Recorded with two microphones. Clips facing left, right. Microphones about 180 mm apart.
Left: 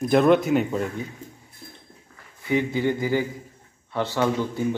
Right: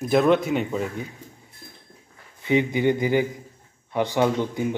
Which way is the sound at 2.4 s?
20° right (ahead or behind).